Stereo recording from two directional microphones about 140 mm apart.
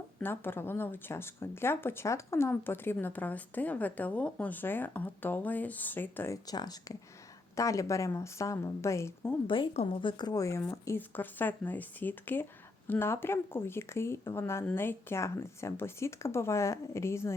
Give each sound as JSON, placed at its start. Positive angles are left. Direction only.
{"t": 0.2, "sound": "speech", "side_deg": 15}
{"t": 9.5, "sound": "a woman's voice", "side_deg": 40}